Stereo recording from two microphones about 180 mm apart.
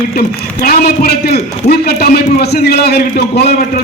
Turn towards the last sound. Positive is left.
turn(degrees=60)  # may be behind; listen again after turning